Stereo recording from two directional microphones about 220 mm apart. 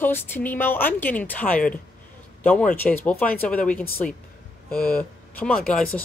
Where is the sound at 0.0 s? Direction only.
10° left (ahead or behind).